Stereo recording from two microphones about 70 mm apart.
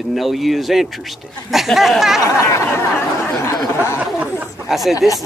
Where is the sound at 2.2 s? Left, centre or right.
Left.